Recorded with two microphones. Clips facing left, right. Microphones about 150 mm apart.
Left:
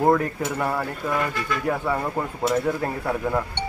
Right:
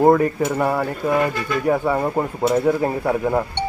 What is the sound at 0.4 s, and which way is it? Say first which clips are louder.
Speech: right 6 dB; 20° right (ahead or behind).